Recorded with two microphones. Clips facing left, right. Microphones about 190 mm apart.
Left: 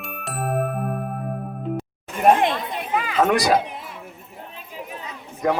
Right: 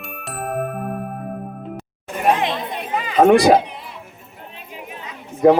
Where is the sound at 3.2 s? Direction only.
30° right (ahead or behind).